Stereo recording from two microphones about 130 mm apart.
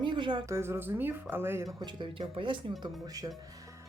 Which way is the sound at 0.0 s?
40° right (ahead or behind).